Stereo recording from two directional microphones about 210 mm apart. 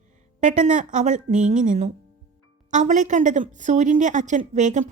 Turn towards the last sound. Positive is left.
turn(degrees=-35)  # may be behind; listen again after turning